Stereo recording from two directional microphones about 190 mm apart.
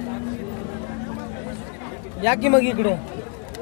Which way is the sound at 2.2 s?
20° left (ahead or behind).